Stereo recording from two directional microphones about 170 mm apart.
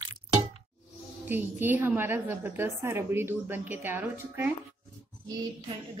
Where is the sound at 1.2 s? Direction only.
10° right (ahead or behind).